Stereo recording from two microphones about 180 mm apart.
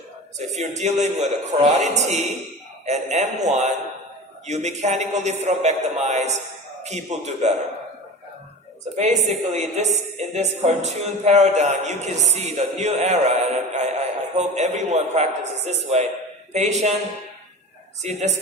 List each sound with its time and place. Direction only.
0.3 s speech: 40° right (ahead or behind)
9.0 s speech: 40° right (ahead or behind)